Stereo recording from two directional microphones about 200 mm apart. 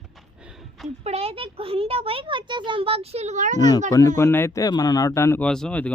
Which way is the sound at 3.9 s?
15° left (ahead or behind).